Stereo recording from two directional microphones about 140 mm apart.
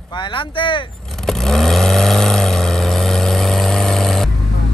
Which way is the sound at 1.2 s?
5° left (ahead or behind).